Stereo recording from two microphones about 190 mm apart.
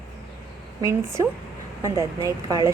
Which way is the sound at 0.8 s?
15° right (ahead or behind).